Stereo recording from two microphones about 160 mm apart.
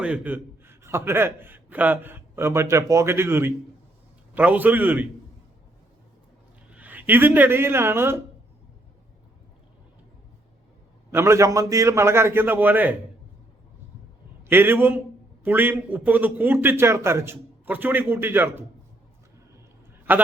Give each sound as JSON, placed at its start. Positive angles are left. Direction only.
{"t": 0.0, "sound": "a man's voice", "side_deg": -10}
{"t": 6.7, "sound": "speech", "side_deg": -10}
{"t": 11.1, "sound": "a man's voice", "side_deg": -15}
{"t": 14.4, "sound": "a man's voice", "side_deg": -15}
{"t": 20.1, "sound": "a man's voice", "side_deg": -15}